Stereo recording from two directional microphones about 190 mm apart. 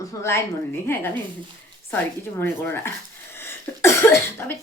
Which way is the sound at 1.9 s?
10° left (ahead or behind).